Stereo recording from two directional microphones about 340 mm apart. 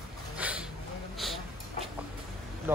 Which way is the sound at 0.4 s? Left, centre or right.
Centre.